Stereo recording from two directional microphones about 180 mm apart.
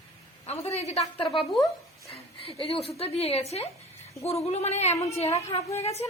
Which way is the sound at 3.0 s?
35° left (ahead or behind).